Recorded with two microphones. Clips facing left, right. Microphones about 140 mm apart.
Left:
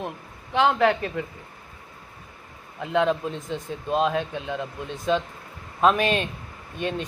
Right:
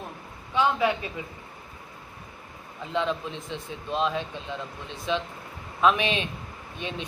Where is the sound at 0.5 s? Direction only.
65° left (ahead or behind).